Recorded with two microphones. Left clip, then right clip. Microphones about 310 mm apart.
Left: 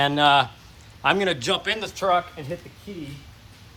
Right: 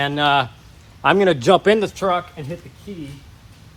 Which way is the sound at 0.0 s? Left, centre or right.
Centre.